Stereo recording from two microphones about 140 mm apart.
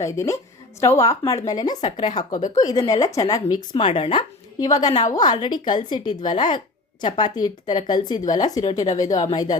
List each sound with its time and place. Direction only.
0.0 s speech: 25° left (ahead or behind)
3.9 s speech: 40° left (ahead or behind)
4.6 s speech: 30° left (ahead or behind)